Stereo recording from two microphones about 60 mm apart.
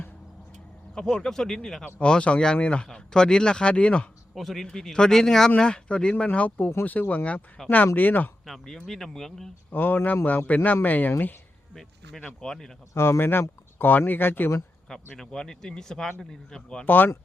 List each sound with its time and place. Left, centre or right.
0.9 s a man's voice: centre
4.4 s a man's voice: centre; by 7.2 s left
7.6 s speech: centre
7.9 s speech: left
8.4 s speech: centre
9.7 s a man's voice: left
11.7 s speech: centre
12.9 s speech: left
15.2 s speech: centre
16.8 s speech: left